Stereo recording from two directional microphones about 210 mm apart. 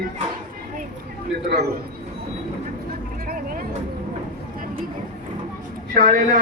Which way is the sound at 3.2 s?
45° right (ahead or behind).